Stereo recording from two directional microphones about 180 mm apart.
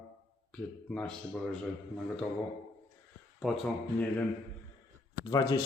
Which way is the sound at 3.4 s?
Centre (ahead or behind).